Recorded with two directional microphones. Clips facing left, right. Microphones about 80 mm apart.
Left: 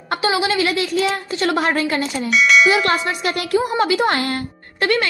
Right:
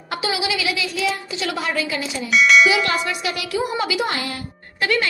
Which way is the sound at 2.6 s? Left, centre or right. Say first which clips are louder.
Left 3 dB; left.